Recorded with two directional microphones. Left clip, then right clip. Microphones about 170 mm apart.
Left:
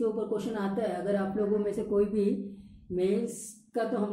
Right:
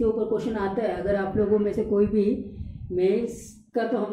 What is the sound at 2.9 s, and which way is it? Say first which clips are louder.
Speech: right 6 dB; 15° left (ahead or behind).